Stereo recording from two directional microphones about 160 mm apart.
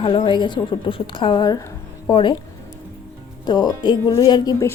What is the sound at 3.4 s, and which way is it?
Speech, 25° left (ahead or behind).